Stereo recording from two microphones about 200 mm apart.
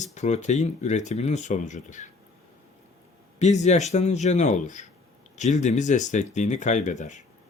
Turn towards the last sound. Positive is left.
turn(degrees=35)  # may be behind; listen again after turning